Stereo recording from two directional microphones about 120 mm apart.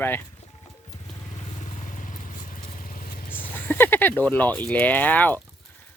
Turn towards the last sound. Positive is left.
turn(degrees=15)  # may be behind; listen again after turning